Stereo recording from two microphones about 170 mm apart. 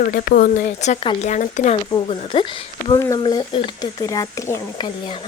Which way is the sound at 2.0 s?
30° left (ahead or behind).